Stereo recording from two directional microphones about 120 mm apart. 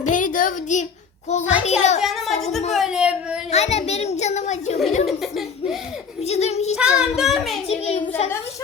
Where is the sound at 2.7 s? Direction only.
5° right (ahead or behind).